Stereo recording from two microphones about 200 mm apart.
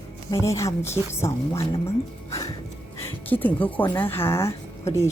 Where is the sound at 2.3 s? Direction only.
15° left (ahead or behind).